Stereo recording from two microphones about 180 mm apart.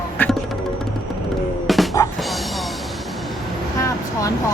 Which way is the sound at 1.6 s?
Centre (ahead or behind).